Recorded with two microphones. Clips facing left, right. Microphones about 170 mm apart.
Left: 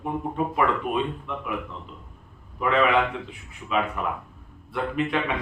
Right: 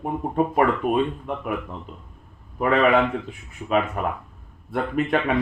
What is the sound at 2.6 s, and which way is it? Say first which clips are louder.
Speech: right 2 dB; 50° right (ahead or behind).